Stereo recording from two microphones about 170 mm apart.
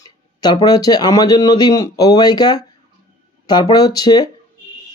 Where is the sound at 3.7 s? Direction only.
20° left (ahead or behind).